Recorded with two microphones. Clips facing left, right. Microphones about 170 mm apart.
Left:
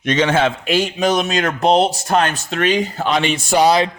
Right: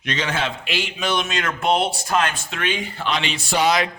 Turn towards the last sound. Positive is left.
turn(degrees=45)  # may be behind; listen again after turning